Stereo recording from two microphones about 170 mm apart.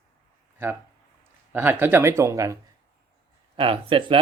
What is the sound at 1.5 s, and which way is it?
Speech, 10° right (ahead or behind).